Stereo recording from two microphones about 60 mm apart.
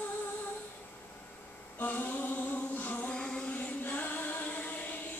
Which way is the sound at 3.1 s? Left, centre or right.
Centre.